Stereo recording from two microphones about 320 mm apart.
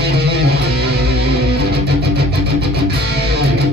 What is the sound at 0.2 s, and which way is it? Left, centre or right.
Music, right.